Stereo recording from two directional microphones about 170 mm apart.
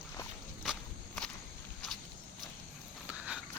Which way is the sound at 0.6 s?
Centre (ahead or behind).